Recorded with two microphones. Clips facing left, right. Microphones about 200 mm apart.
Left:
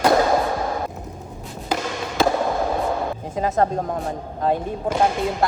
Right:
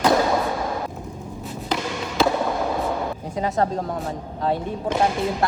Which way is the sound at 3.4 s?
45° left (ahead or behind).